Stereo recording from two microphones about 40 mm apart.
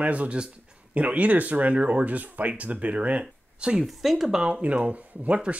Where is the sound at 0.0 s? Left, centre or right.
Right.